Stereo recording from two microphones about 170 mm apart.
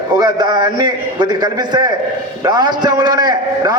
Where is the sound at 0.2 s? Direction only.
25° right (ahead or behind).